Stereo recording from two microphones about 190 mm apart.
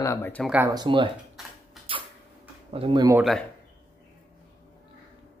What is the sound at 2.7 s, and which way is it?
Speech, 25° right (ahead or behind).